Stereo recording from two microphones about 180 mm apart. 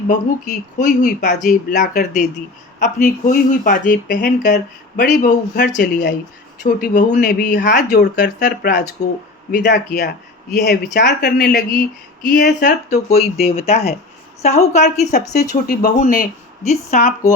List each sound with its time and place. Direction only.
0.1 s speech: 45° left (ahead or behind)
4.5 s speech: 70° left (ahead or behind)
6.6 s speech: 50° left (ahead or behind)
7.9 s speech: 65° left (ahead or behind)
9.0 s a woman's voice: 40° left (ahead or behind)
9.6 s speech: 70° left (ahead or behind); by 12.5 s 50° left (ahead or behind)
12.5 s speech: 65° left (ahead or behind)
13.1 s a woman's voice: 35° left (ahead or behind)
15.4 s speech: 55° left (ahead or behind)